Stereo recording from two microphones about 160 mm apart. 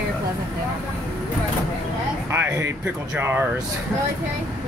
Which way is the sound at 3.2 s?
15° right (ahead or behind).